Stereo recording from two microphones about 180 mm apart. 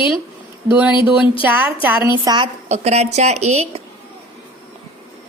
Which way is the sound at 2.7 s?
35° right (ahead or behind).